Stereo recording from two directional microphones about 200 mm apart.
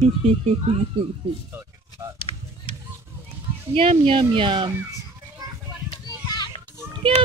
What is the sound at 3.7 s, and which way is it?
Speech, 30° right (ahead or behind).